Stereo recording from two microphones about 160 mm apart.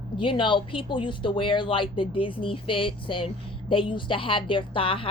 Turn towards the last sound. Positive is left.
turn(degrees=35)  # may be behind; listen again after turning